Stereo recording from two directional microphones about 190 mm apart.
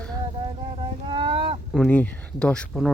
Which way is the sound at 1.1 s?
25° right (ahead or behind).